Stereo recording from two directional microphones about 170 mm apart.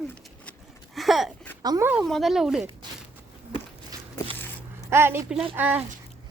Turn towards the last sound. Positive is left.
turn(degrees=-10)  # may be behind; listen again after turning